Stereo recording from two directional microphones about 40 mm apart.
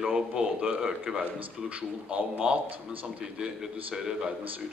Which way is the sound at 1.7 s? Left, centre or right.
Right.